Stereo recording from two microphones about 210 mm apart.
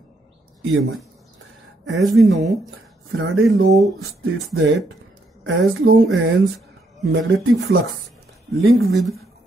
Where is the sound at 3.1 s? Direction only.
70° right (ahead or behind).